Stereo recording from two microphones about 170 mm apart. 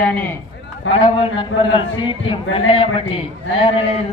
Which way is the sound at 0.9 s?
30° left (ahead or behind).